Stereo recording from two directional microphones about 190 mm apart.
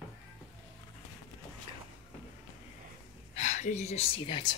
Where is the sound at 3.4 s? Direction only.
40° left (ahead or behind).